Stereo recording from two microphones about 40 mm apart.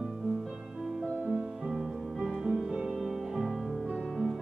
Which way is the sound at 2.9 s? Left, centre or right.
Centre.